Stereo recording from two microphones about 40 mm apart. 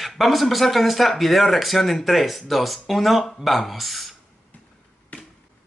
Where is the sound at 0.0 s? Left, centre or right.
Centre.